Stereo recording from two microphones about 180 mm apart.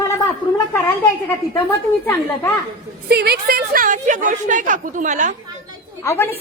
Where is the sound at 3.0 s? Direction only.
60° right (ahead or behind); by 5.3 s 45° right (ahead or behind).